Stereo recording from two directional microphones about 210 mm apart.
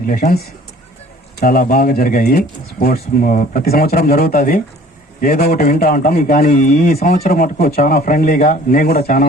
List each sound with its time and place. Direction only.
0.0 s a man's voice: 45° left (ahead or behind)